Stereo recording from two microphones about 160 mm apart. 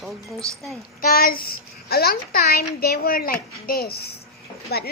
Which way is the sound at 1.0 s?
70° left (ahead or behind).